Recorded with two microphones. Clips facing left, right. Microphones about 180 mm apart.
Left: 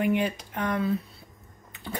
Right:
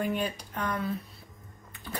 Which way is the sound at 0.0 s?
20° left (ahead or behind).